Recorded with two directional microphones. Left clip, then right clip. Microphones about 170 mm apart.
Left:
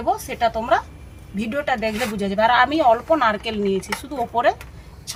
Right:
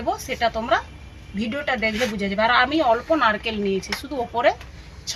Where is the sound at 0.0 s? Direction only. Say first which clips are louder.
Left 2 dB; 15° left (ahead or behind).